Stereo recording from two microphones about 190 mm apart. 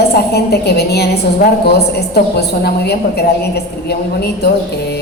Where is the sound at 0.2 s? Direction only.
60° left (ahead or behind).